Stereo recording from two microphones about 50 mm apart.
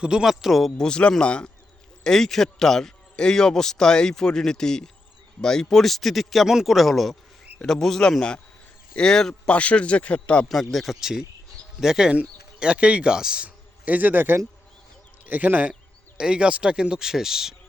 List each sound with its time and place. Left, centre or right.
0.0 s a man's voice: centre
0.3 s a man's voice: centre
0.8 s speech: centre
2.0 s a man's voice: centre
9.5 s speech: left
10.5 s a man's voice: centre
11.0 s a man's voice: centre
12.5 s speech: right
13.8 s a man's voice: right
16.1 s a man's voice: centre